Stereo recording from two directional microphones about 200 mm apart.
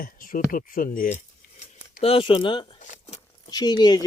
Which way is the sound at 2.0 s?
25° left (ahead or behind).